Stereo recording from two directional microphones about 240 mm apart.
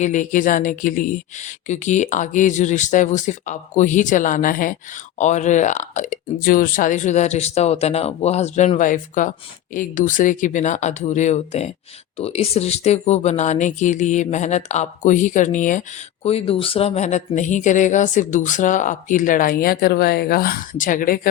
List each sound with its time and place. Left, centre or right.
0.0 s speech: left